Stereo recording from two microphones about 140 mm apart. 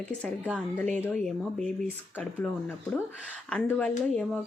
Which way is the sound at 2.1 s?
10° left (ahead or behind).